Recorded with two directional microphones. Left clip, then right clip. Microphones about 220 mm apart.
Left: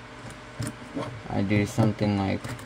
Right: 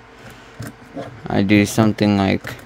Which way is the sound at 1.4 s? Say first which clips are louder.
Right 10 dB; 55° right (ahead or behind).